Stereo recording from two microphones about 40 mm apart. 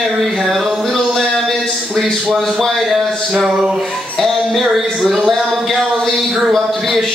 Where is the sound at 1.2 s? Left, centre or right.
Centre.